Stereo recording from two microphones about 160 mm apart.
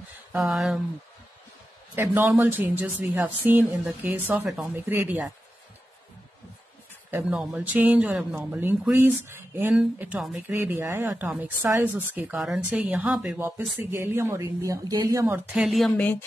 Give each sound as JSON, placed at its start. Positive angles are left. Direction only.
{"t": 0.3, "sound": "speech", "side_deg": 0}
{"t": 2.0, "sound": "a woman's voice", "side_deg": -15}
{"t": 7.1, "sound": "a woman's voice", "side_deg": -10}
{"t": 10.5, "sound": "a woman's voice", "side_deg": -15}